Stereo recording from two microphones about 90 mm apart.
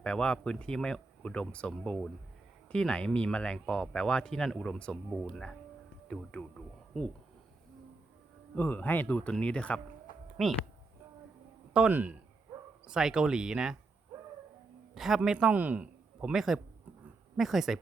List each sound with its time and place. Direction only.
0.0 s speech: 10° left (ahead or behind)
8.5 s speech: 20° left (ahead or behind)
10.4 s speech: centre (ahead or behind)
11.9 s speech: 20° right (ahead or behind)
12.9 s speech: 10° right (ahead or behind)
14.9 s a man's voice: 5° right (ahead or behind)
16.3 s speech: 5° right (ahead or behind)